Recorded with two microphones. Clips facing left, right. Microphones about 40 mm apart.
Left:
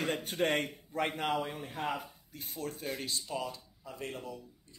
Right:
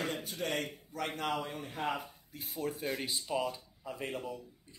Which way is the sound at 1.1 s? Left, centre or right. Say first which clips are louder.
Left 2 dB; centre.